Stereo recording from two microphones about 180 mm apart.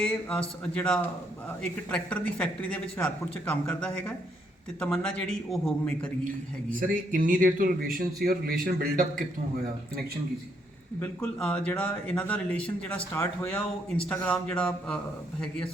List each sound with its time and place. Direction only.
0.0 s speech: 5° left (ahead or behind)
6.2 s speech: 50° right (ahead or behind)
11.0 s speech: 5° left (ahead or behind)